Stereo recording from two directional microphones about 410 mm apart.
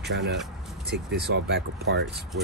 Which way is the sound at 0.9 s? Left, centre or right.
Right.